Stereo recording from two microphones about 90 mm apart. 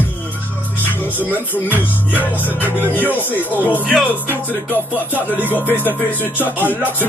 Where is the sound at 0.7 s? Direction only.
20° left (ahead or behind).